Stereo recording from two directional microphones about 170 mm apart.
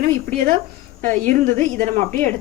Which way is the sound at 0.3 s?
50° right (ahead or behind).